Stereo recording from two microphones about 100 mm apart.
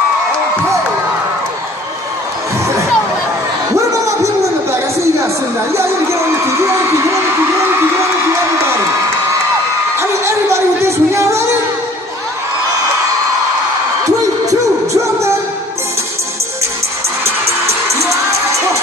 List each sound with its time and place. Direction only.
3.7 s crowd: 30° right (ahead or behind)
5.0 s music: 30° right (ahead or behind)
9.9 s a sound: 30° right (ahead or behind)
14.5 s music: 30° right (ahead or behind)